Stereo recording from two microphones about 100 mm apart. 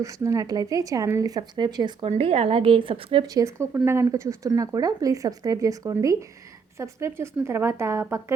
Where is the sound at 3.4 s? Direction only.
30° right (ahead or behind).